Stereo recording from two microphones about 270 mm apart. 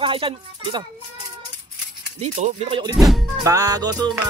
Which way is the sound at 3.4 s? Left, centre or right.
Centre.